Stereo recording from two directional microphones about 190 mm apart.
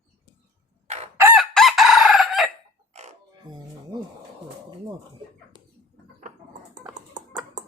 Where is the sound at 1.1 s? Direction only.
10° right (ahead or behind).